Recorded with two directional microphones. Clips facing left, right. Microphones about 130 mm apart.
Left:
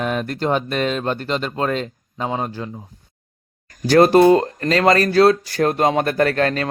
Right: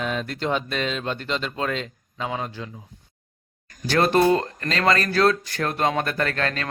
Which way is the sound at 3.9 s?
40° left (ahead or behind).